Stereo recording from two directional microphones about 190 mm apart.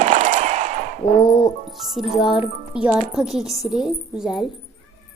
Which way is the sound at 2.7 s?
5° right (ahead or behind).